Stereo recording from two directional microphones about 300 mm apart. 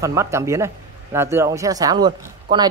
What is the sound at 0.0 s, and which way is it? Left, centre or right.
Speech, centre.